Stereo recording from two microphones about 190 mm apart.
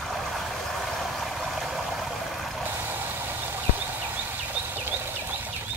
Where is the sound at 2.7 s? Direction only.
10° right (ahead or behind).